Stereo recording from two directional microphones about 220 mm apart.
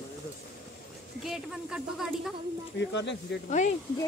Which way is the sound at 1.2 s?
Centre (ahead or behind).